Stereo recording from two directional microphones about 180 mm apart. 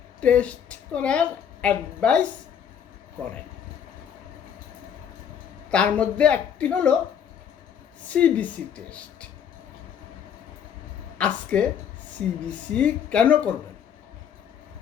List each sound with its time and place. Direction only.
0.2 s a woman's voice: 5° left (ahead or behind)
5.7 s speech: 5° left (ahead or behind)
8.1 s speech: 5° left (ahead or behind)
11.2 s speech: 5° left (ahead or behind)